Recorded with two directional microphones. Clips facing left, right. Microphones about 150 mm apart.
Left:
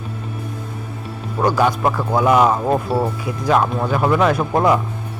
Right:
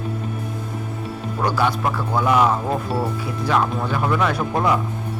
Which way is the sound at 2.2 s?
30° left (ahead or behind).